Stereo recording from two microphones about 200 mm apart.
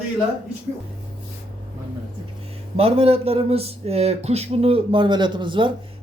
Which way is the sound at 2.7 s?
30° right (ahead or behind).